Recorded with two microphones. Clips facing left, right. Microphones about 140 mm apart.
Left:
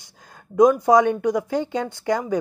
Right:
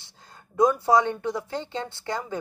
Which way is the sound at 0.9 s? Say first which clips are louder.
Left 5 dB; 15° left (ahead or behind).